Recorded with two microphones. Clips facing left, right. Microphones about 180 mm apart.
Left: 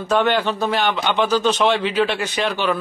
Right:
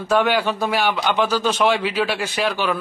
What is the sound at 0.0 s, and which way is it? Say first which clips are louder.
A man's voice: even; 5° right (ahead or behind).